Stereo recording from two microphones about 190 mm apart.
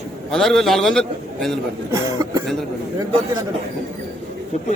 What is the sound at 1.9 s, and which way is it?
Speech, 15° right (ahead or behind).